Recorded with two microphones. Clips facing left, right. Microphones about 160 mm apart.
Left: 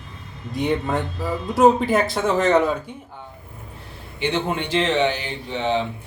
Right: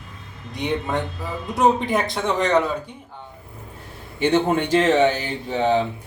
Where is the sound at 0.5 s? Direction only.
Centre (ahead or behind).